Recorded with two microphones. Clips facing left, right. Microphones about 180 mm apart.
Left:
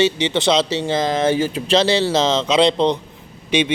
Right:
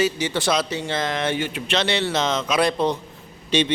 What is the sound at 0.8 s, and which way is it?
A man's voice, 30° left (ahead or behind).